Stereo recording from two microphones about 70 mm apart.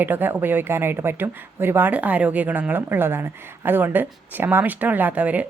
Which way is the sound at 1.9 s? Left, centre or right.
Centre.